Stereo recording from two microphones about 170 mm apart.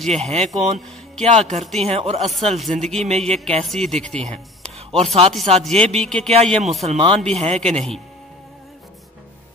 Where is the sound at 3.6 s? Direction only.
Centre (ahead or behind).